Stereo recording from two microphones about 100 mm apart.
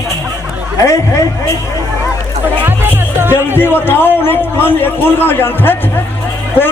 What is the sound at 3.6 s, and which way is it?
A man's voice, 20° left (ahead or behind).